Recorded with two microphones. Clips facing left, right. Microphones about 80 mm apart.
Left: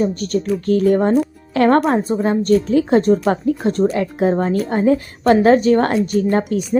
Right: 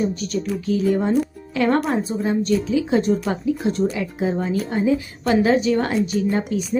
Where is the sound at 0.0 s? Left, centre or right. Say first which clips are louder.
Left 4 dB; left.